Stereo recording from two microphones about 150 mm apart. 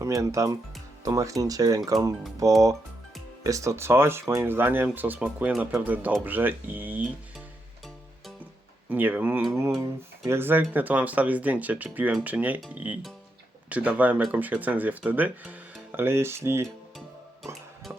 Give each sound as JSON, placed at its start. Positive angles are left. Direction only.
{"t": 0.0, "sound": "speech", "side_deg": -20}
{"t": 8.9, "sound": "speech", "side_deg": -10}
{"t": 17.4, "sound": "music", "side_deg": 0}